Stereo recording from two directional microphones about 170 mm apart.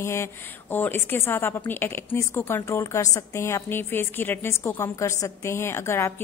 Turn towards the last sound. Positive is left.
turn(degrees=15)  # may be behind; listen again after turning